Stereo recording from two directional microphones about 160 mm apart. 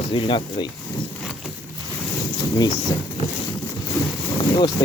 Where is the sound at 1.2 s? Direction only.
Centre (ahead or behind).